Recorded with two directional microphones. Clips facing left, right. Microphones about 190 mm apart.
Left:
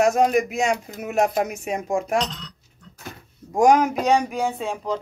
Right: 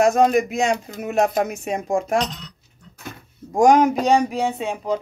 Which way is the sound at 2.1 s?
10° right (ahead or behind).